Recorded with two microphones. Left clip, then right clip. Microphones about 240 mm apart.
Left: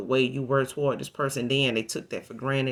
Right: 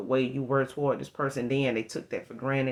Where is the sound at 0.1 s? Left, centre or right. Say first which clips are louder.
Left 3 dB; left.